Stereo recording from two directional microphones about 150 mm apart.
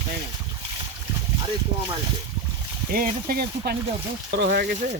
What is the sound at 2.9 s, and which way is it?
Speech, 75° right (ahead or behind).